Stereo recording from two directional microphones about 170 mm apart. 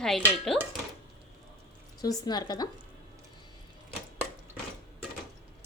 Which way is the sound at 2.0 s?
20° left (ahead or behind).